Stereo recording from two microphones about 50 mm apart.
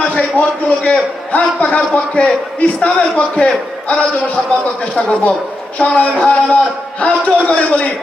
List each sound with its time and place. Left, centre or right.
0.0 s a man's voice: left